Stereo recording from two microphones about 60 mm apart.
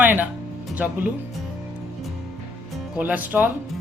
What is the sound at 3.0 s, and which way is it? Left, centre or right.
Speech, right.